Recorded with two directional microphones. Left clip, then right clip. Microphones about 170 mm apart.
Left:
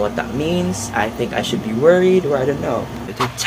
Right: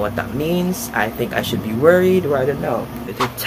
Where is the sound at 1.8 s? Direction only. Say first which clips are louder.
Left 1 dB; 15° right (ahead or behind).